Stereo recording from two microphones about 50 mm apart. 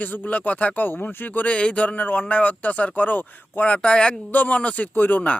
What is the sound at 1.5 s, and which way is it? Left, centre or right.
A man's voice, left.